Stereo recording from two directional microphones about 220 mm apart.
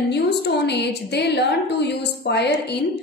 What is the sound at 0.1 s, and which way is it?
A woman's voice, 50° left (ahead or behind).